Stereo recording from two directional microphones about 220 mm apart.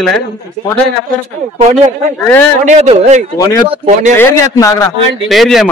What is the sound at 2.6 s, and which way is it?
Speech, 30° right (ahead or behind).